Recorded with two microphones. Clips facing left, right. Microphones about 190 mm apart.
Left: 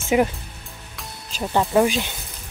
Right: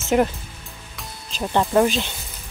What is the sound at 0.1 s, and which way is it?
Speech, 5° left (ahead or behind).